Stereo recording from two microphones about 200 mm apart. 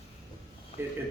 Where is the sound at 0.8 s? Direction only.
10° right (ahead or behind).